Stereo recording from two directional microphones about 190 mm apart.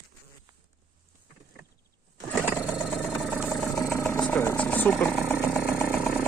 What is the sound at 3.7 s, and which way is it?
Vehicle, 15° left (ahead or behind).